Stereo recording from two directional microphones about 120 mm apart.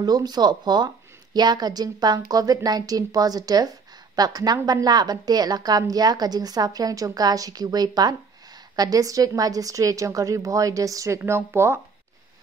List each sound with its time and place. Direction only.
0.0 s a woman's voice: 35° right (ahead or behind)